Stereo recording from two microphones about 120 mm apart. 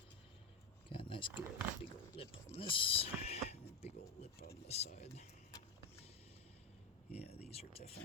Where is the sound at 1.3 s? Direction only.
10° right (ahead or behind).